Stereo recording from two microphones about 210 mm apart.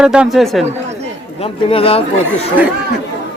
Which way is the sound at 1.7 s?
25° left (ahead or behind).